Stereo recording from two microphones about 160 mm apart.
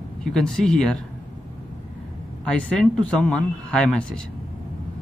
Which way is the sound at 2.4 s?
5° left (ahead or behind).